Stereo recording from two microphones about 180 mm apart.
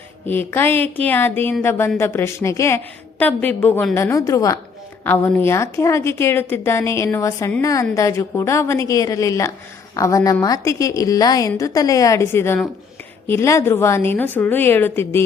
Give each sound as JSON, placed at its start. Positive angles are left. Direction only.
{"t": 0.3, "sound": "a woman's voice", "side_deg": 10}